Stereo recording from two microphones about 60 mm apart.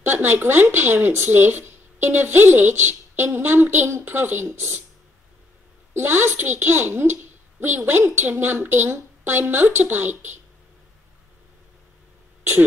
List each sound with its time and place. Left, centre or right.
0.0 s speech: right
5.9 s speech: right